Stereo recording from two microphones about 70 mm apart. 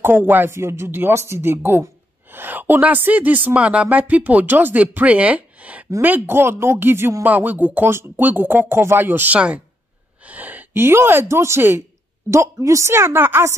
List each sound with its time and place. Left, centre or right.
0.0 s a woman's voice: right
0.6 s a woman's voice: right
7.2 s a woman's voice: right